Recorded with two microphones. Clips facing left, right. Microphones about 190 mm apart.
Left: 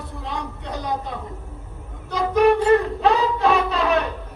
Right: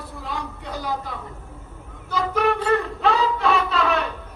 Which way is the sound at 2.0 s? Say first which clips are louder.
Left 5 dB; 20° left (ahead or behind).